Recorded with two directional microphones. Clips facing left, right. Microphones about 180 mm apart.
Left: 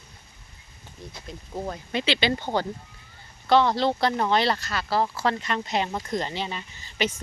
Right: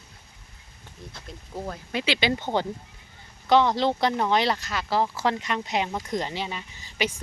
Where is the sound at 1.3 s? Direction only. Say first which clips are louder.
Left 2 dB; centre (ahead or behind).